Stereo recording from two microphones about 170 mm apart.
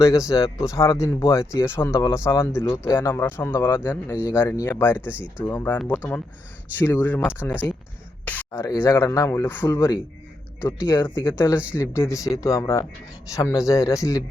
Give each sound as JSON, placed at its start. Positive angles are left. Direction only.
{"t": 0.0, "sound": "speech", "side_deg": 20}
{"t": 4.9, "sound": "speech", "side_deg": -10}
{"t": 5.5, "sound": "speech", "side_deg": 10}
{"t": 8.2, "sound": "a sound", "side_deg": 10}
{"t": 8.6, "sound": "speech", "side_deg": 20}
{"t": 10.8, "sound": "speech", "side_deg": 15}